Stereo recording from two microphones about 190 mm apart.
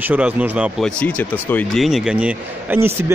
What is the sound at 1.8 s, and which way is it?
Speech, 5° right (ahead or behind).